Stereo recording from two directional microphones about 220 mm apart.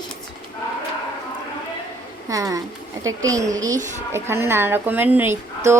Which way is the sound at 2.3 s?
15° right (ahead or behind).